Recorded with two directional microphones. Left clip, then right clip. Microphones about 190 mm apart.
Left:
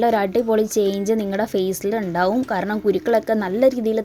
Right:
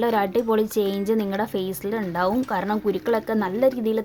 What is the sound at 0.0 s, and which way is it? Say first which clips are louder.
Speech: left 3 dB; 15° left (ahead or behind).